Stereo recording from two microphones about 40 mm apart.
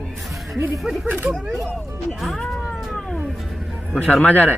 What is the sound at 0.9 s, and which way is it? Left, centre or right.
Speech, right.